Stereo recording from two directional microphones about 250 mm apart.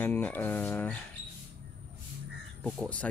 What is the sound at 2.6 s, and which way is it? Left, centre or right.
Speech, centre.